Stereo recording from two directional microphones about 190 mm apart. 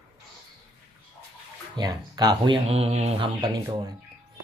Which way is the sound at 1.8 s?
20° right (ahead or behind).